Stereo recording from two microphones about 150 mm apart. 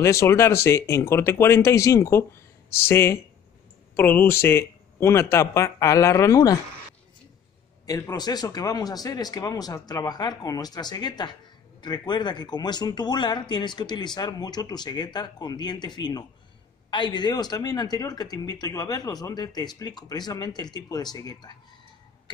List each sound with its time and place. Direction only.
0.0 s speech: 20° left (ahead or behind)
7.8 s speech: 25° left (ahead or behind)